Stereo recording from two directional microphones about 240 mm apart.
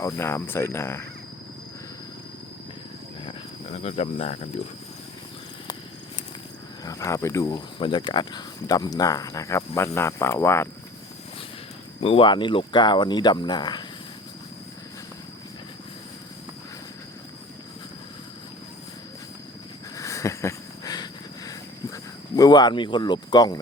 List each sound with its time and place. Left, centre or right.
0.0 s speech: centre
3.2 s cricket: left
6.8 s speech: centre
11.9 s speech: left
20.0 s a sound: centre
21.9 s speech: centre